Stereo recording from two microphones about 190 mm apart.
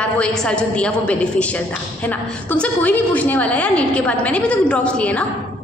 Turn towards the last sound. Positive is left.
turn(degrees=5)  # may be behind; listen again after turning